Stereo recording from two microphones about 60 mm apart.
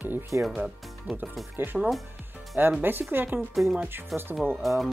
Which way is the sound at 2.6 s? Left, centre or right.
Right.